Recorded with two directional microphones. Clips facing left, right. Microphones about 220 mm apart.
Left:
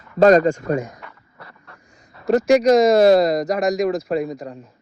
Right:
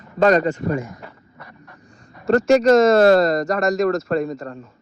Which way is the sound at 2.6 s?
15° left (ahead or behind).